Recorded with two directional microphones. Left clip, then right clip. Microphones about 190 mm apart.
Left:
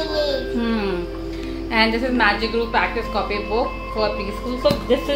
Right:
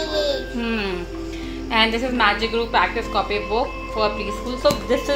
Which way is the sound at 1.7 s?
15° right (ahead or behind).